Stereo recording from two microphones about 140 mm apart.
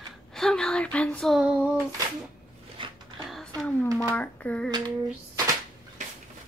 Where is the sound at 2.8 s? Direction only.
35° right (ahead or behind).